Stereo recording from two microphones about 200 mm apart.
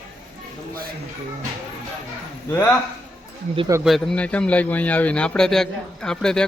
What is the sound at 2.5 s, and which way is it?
Speech, 10° left (ahead or behind).